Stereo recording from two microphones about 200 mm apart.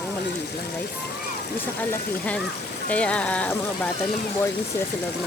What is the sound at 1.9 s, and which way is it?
Speech, 5° left (ahead or behind).